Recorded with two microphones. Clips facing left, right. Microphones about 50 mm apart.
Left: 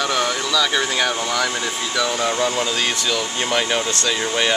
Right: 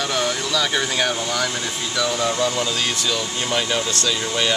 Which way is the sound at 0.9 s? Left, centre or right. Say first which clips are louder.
Left 1 dB; centre.